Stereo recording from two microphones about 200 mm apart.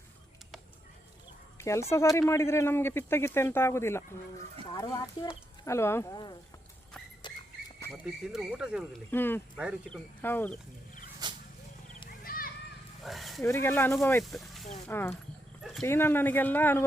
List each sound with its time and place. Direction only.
1.5 s speech: 15° left (ahead or behind)
7.2 s a sound: 25° left (ahead or behind)
8.3 s speech: 5° right (ahead or behind)
9.0 s speech: 10° left (ahead or behind)
11.2 s a sound: 20° right (ahead or behind)
12.0 s wild animals: 45° left (ahead or behind)
13.0 s dog: centre (ahead or behind)
13.4 s speech: 10° left (ahead or behind)
14.3 s speech: centre (ahead or behind)
14.8 s speech: 10° left (ahead or behind)
15.6 s speech: centre (ahead or behind)
15.9 s speech: 10° left (ahead or behind)